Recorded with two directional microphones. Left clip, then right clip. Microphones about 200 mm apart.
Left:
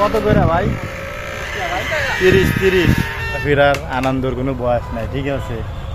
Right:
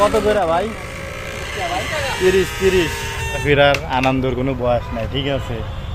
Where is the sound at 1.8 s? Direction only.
85° right.